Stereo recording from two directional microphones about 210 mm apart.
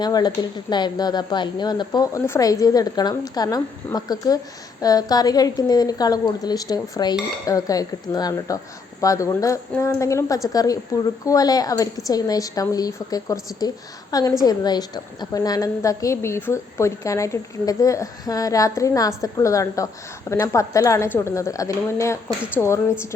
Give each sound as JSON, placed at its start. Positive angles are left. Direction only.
{"t": 0.0, "sound": "a woman's voice", "side_deg": 20}